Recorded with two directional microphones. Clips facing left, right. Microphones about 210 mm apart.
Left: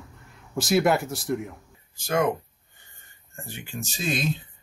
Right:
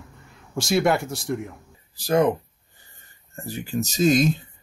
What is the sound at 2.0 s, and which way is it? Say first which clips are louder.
Speech: right 5 dB; 35° right (ahead or behind).